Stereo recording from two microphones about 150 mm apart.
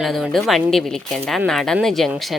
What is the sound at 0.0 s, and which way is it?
Speech, centre (ahead or behind).